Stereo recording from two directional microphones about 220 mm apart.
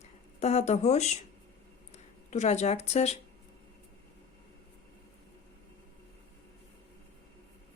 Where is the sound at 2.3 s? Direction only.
30° left (ahead or behind).